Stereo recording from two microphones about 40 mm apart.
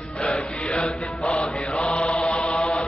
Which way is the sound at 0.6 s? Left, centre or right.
Left.